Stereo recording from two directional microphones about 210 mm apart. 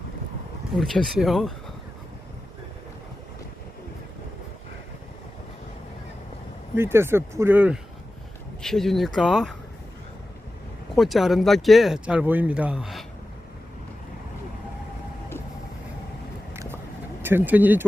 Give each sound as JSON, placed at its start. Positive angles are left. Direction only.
{"t": 0.8, "sound": "speech", "side_deg": 0}
{"t": 6.7, "sound": "speech", "side_deg": -10}
{"t": 10.9, "sound": "speech", "side_deg": 0}
{"t": 17.2, "sound": "speech", "side_deg": -10}